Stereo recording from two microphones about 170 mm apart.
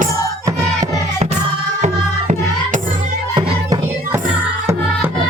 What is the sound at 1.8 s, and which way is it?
Music, 45° right (ahead or behind).